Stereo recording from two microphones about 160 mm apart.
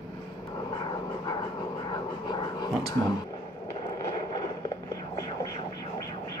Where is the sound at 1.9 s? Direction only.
25° left (ahead or behind).